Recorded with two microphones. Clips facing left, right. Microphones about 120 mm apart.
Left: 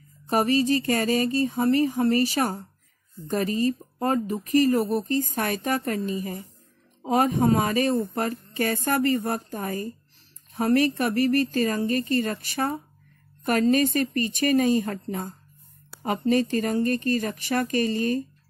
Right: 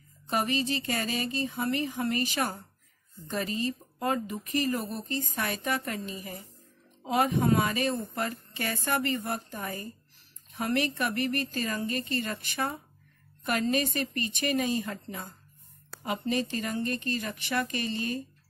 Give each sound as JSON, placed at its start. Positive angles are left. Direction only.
{"t": 0.3, "sound": "a woman's voice", "side_deg": 40}